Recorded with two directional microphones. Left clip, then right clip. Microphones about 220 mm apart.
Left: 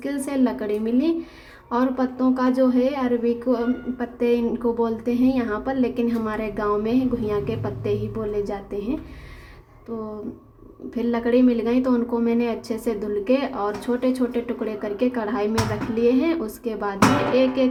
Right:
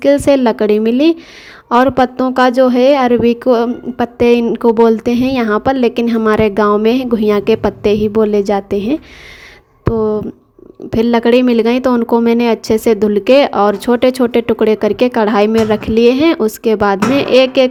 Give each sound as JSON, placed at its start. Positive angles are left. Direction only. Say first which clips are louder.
{"t": 0.0, "sound": "a woman's voice", "louder": "right 15 dB", "side_deg": -40}
{"t": 10.8, "sound": "a woman's voice", "louder": "right 12 dB", "side_deg": -40}